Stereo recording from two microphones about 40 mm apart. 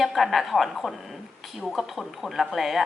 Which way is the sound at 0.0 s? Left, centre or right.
Centre.